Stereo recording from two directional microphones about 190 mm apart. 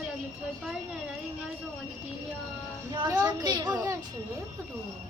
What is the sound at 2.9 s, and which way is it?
A woman's voice, 25° right (ahead or behind).